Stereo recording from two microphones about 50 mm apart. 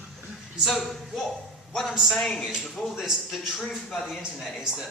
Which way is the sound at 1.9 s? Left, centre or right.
Centre.